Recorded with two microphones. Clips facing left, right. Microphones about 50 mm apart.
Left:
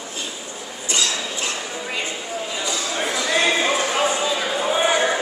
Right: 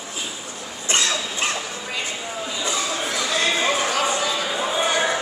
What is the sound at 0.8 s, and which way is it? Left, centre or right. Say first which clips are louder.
Dog: right 1 dB; right.